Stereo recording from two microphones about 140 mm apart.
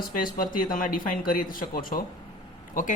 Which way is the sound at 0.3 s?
85° left.